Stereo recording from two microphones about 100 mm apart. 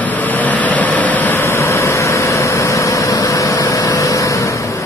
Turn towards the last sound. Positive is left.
turn(degrees=30)  # may be behind; listen again after turning